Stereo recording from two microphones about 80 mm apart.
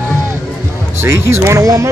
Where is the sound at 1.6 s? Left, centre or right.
Right.